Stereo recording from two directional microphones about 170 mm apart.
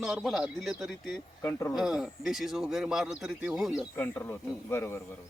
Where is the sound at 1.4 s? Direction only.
15° left (ahead or behind).